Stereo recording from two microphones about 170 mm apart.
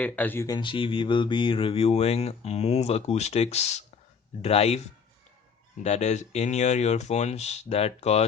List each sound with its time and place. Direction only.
0.0 s speech: 10° left (ahead or behind)
0.4 s mantra: 25° left (ahead or behind)
5.8 s mantra: 40° left (ahead or behind)